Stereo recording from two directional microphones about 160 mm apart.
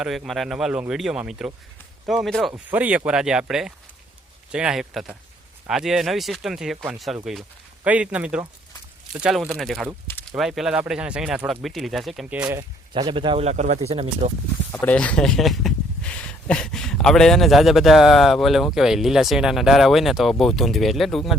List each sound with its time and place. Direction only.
0.0 s speech: 5° right (ahead or behind)
2.5 s speech: 10° right (ahead or behind)
12.5 s speech: 20° right (ahead or behind)
13.0 s speech: 30° right (ahead or behind)
14.8 s speech: 10° left (ahead or behind)